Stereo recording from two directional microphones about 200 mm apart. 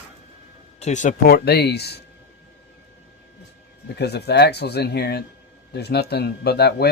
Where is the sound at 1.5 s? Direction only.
55° left (ahead or behind).